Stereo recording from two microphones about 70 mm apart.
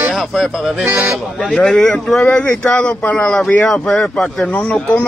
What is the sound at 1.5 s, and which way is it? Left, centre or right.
Speech, centre.